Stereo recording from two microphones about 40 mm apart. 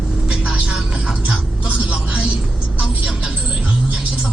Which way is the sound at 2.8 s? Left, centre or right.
Centre.